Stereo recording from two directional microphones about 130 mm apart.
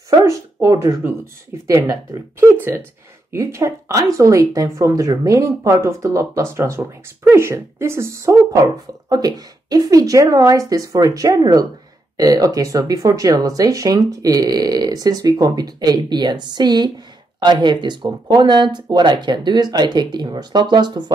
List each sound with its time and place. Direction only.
0.2 s speech: 25° right (ahead or behind)